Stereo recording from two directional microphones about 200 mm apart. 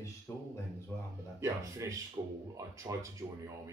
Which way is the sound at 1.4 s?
15° right (ahead or behind).